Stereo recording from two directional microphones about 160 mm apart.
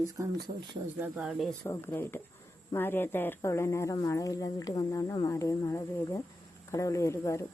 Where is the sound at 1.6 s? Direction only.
15° left (ahead or behind).